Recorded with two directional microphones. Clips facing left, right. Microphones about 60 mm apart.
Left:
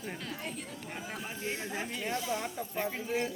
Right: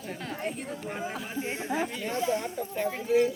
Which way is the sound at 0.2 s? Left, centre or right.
Right.